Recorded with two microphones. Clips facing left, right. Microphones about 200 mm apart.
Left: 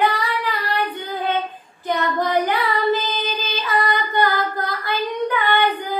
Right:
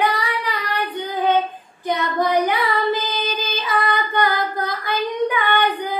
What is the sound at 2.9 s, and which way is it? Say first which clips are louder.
Child singing: left 1 dB; 10° right (ahead or behind).